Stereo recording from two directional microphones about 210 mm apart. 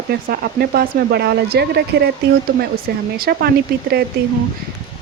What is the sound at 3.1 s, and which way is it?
Speech, 45° right (ahead or behind).